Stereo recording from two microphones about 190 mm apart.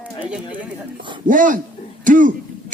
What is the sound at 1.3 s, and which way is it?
Speech, 45° right (ahead or behind).